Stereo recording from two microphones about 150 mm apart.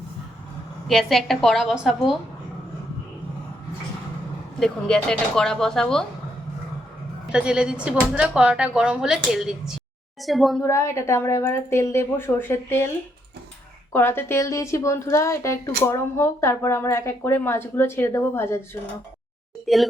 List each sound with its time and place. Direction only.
0.9 s speech: centre (ahead or behind)
4.6 s speech: 5° left (ahead or behind)
7.3 s speech: 5° right (ahead or behind)
10.6 s speech: 20° left (ahead or behind)
13.9 s speech: 15° left (ahead or behind)
19.6 s speech: centre (ahead or behind)